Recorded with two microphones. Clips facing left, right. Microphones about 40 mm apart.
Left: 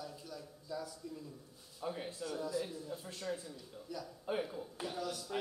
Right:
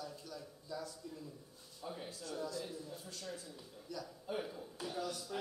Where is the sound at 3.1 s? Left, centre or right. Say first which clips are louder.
Left 5 dB; left.